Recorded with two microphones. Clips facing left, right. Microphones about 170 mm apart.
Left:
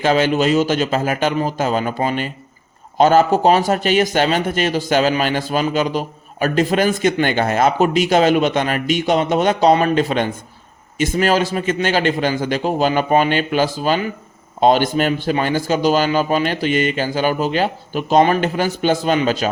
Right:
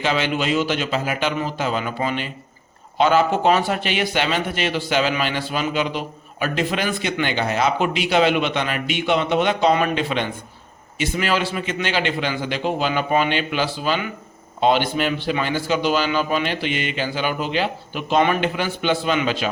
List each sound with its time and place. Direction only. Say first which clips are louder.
0.0 s a man's voice: left 6 dB; 45° left (ahead or behind)